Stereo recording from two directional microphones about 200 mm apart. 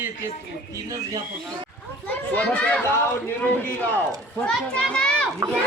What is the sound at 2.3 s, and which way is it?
A man's voice, 10° left (ahead or behind).